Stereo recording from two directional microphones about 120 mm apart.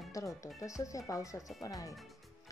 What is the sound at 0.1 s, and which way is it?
Speech, 25° left (ahead or behind).